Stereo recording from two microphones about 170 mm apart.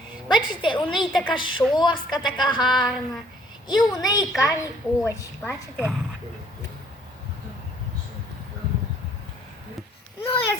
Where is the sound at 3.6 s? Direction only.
25° left (ahead or behind).